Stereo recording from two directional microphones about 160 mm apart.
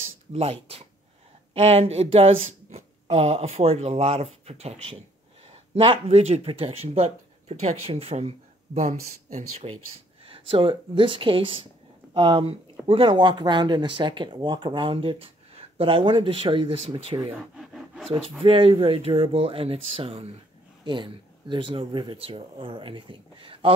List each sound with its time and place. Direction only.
0.3 s speech: 35° right (ahead or behind)
10.2 s speech: 35° right (ahead or behind)
17.6 s a sound: centre (ahead or behind)
18.4 s speech: 35° right (ahead or behind)